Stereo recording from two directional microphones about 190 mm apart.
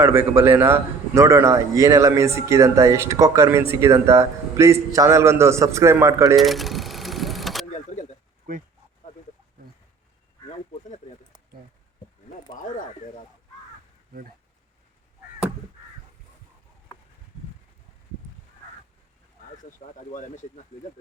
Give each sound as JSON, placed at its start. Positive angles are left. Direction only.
{"t": 0.0, "sound": "a man's voice", "side_deg": -10}
{"t": 6.3, "sound": "vehicle", "side_deg": 0}
{"t": 8.5, "sound": "speech", "side_deg": -45}
{"t": 20.1, "sound": "speech", "side_deg": 40}